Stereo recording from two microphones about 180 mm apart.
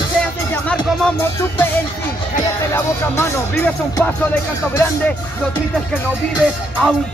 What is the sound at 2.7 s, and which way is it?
Music, 10° left (ahead or behind).